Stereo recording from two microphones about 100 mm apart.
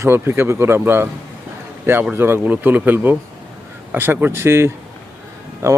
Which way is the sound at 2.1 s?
25° right (ahead or behind).